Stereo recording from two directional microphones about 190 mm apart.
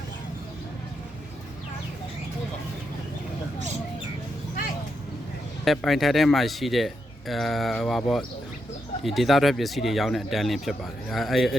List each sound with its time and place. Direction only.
5.6 s speech: centre (ahead or behind)